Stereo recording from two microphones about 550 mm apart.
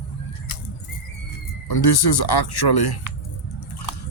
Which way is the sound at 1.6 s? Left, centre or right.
Left.